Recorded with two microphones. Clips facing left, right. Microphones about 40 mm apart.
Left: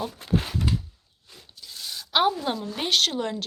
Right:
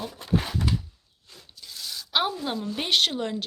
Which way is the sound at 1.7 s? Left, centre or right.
Left.